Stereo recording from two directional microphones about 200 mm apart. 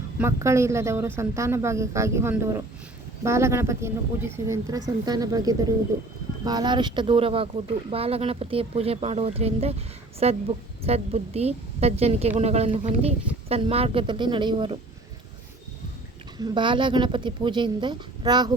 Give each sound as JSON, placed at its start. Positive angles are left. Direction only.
{"t": 0.2, "sound": "a woman's voice", "side_deg": -15}
{"t": 16.4, "sound": "speech", "side_deg": -25}